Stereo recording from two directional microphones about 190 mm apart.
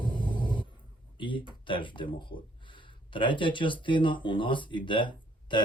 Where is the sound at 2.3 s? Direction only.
45° left (ahead or behind).